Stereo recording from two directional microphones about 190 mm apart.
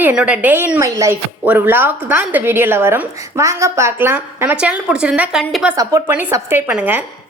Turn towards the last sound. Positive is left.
turn(degrees=-10)  # may be behind; listen again after turning